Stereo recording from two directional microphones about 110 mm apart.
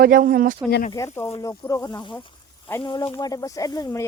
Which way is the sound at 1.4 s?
30° left (ahead or behind).